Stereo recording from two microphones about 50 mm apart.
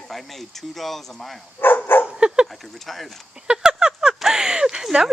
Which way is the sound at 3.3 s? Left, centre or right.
Centre.